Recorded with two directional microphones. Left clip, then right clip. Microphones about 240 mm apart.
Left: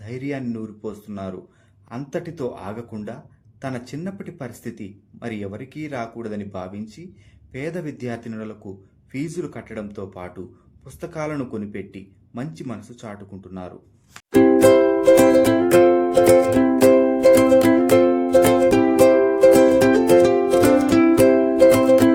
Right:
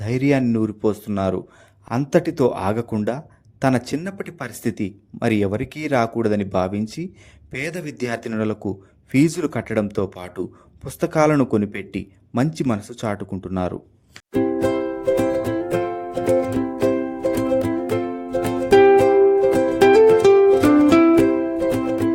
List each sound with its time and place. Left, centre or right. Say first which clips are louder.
0.0 s speech: right 10 dB; right
14.3 s music: left 7 dB; centre